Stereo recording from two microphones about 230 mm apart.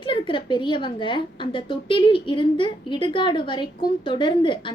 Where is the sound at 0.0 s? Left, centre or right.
Left.